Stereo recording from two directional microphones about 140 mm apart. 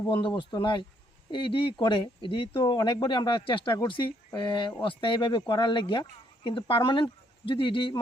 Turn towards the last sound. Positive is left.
turn(degrees=40)  # may be behind; listen again after turning